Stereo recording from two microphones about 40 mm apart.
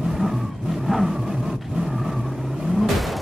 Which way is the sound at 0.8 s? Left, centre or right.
Centre.